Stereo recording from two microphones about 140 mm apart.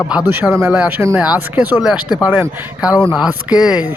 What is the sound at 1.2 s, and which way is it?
Speech, 10° right (ahead or behind).